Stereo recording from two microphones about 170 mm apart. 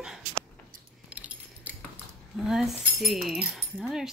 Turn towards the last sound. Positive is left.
turn(degrees=0)  # may be behind; listen again after turning